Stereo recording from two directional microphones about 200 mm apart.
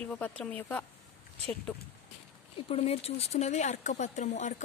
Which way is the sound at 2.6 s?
30° left (ahead or behind).